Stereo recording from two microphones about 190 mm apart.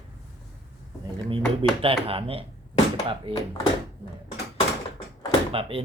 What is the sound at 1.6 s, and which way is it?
Speech, 30° right (ahead or behind).